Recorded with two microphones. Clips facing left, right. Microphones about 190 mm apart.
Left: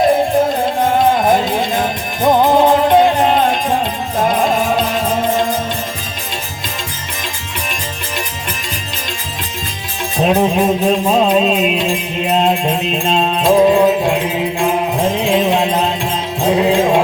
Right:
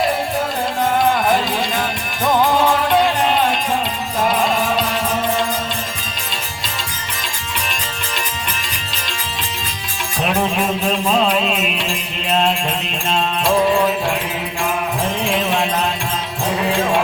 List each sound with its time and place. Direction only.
0.4 s music: 25° left (ahead or behind)
10.2 s music: 20° left (ahead or behind)